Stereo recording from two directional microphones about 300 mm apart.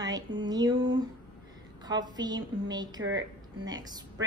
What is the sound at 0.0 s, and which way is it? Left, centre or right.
A woman's voice, centre.